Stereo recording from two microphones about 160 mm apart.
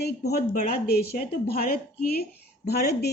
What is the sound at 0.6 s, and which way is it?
A woman's voice, 65° left (ahead or behind).